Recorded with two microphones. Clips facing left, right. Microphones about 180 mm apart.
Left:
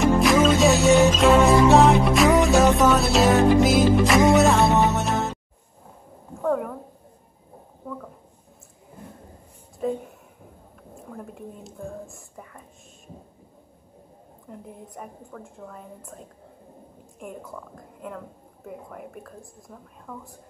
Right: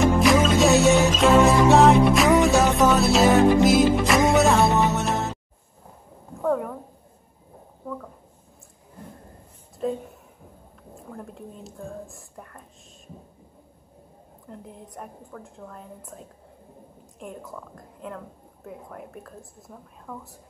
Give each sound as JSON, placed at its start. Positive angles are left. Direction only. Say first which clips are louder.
{"t": 0.0, "sound": "music", "louder": "left 1 dB", "side_deg": 0}
{"t": 6.4, "sound": "a sound", "louder": "even", "side_deg": 0}
{"t": 9.8, "sound": "a woman's voice", "louder": "left 1 dB", "side_deg": 5}
{"t": 11.1, "sound": "speech", "louder": "left 1 dB", "side_deg": 0}
{"t": 14.5, "sound": "a woman's voice", "louder": "left 1 dB", "side_deg": 0}
{"t": 17.2, "sound": "a woman's voice", "louder": "even", "side_deg": 0}